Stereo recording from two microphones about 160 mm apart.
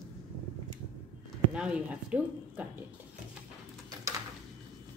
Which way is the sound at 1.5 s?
5° right (ahead or behind).